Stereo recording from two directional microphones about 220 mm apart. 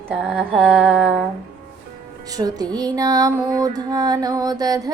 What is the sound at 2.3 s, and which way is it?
Speech, 15° right (ahead or behind).